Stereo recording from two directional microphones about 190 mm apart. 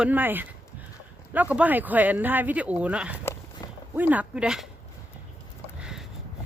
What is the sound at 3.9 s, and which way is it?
Speech, 10° right (ahead or behind).